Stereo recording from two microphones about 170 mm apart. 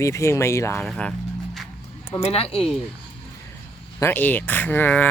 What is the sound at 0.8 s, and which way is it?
Speech, centre (ahead or behind).